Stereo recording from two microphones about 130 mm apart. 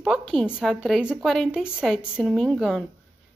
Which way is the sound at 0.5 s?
5° right (ahead or behind).